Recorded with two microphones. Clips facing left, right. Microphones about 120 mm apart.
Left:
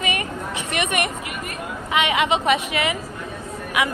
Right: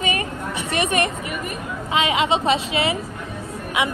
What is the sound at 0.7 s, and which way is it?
A woman's voice, 30° right (ahead or behind).